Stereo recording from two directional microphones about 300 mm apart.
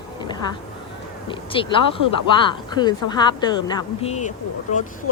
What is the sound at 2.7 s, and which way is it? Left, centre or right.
A woman's voice, centre.